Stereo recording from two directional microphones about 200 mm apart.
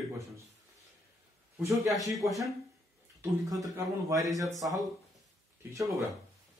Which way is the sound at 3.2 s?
20° right (ahead or behind).